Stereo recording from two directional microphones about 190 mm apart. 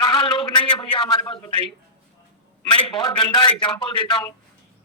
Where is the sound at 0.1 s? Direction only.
25° left (ahead or behind).